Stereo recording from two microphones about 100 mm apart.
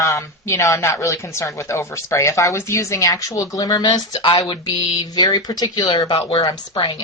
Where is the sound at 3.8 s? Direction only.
55° left (ahead or behind).